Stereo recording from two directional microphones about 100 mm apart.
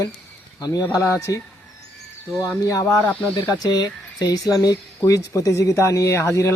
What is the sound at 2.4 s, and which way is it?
Speech, 35° left (ahead or behind).